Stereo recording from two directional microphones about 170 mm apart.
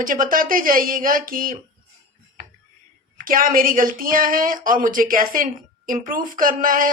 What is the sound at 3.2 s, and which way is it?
Speech, 55° right (ahead or behind).